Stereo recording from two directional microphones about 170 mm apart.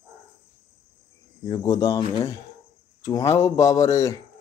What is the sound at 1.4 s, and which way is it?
Speech, 25° left (ahead or behind).